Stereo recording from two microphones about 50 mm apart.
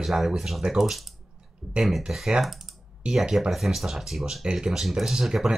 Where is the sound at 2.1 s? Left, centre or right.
Centre.